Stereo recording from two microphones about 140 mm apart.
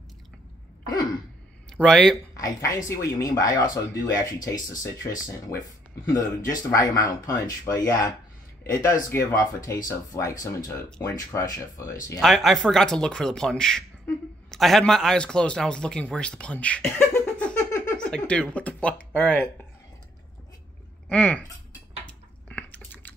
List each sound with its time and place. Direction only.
1.8 s speech: 5° left (ahead or behind)
2.3 s speech: 25° left (ahead or behind)
9.3 s speech: 25° left (ahead or behind)
12.2 s speech: centre (ahead or behind)
16.8 s a sound: 20° left (ahead or behind)
17.9 s speech: 10° left (ahead or behind)
21.1 s speech: 10° left (ahead or behind)
22.0 s a sound: 10° left (ahead or behind)